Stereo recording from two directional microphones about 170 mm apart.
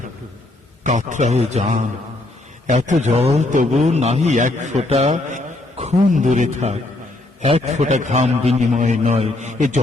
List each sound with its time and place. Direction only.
0.9 s a man's voice: 45° right (ahead or behind)